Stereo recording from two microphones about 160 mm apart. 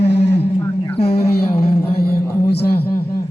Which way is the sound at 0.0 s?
90° left.